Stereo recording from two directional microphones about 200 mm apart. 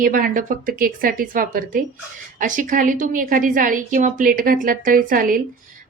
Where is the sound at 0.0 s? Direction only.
45° right (ahead or behind).